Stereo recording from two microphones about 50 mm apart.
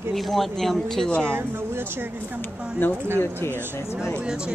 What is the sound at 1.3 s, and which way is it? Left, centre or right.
Speech, right.